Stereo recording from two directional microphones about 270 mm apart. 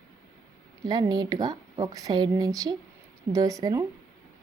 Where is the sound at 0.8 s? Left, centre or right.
Centre.